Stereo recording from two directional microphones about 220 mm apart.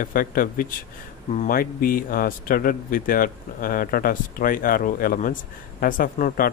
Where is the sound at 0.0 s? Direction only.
40° left (ahead or behind).